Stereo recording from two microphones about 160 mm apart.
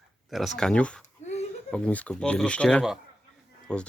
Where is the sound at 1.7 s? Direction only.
10° left (ahead or behind).